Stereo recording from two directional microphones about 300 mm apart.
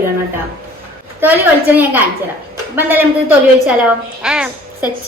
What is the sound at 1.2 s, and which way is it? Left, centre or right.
A woman's voice, centre.